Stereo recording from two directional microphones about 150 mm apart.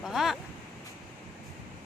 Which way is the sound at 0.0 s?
Centre (ahead or behind).